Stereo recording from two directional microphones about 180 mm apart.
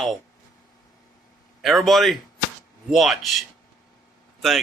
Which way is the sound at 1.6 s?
Centre (ahead or behind).